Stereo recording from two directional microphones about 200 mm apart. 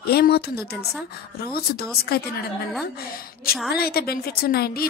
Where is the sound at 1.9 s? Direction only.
50° left (ahead or behind).